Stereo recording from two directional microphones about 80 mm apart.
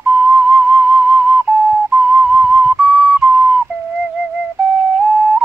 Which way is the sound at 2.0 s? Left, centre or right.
Centre.